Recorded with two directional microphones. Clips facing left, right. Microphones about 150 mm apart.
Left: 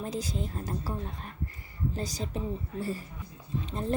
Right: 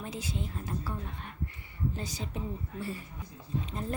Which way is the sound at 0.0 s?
40° left (ahead or behind).